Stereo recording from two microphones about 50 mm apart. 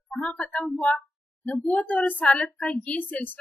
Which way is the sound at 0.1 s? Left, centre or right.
Left.